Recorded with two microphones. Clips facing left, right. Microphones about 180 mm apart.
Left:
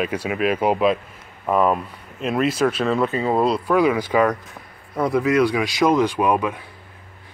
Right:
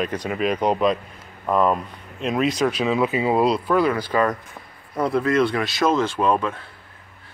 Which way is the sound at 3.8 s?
15° left (ahead or behind).